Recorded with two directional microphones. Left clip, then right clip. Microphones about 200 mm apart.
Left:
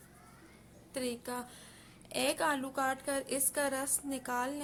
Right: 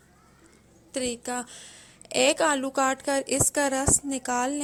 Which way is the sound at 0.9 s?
35° right (ahead or behind).